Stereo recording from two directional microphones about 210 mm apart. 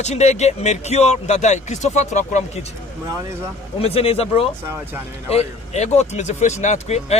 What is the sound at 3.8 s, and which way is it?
Speech, 30° left (ahead or behind).